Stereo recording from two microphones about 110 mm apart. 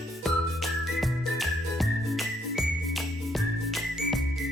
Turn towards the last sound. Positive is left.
turn(degrees=0)  # may be behind; listen again after turning